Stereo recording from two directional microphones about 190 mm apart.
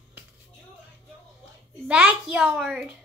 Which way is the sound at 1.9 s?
5° right (ahead or behind).